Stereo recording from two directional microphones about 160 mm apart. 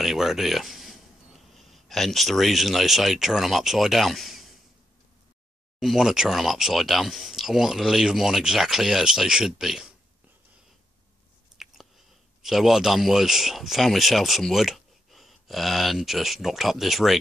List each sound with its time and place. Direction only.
0.0 s speech: centre (ahead or behind)
5.8 s speech: centre (ahead or behind)
11.5 s chewing: centre (ahead or behind)
12.4 s speech: centre (ahead or behind)